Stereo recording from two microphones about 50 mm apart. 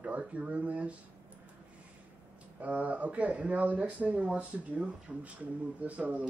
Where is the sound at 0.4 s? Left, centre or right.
Right.